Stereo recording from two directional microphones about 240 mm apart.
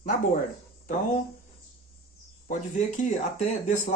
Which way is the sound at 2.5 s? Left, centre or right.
Left.